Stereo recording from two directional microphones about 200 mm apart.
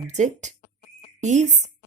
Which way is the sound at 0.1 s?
35° right (ahead or behind).